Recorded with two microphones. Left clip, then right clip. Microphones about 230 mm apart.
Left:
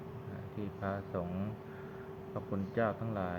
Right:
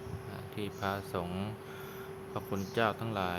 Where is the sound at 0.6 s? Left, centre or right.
Right.